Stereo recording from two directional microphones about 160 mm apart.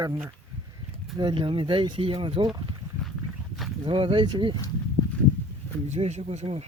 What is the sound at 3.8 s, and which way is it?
Speech, 30° right (ahead or behind).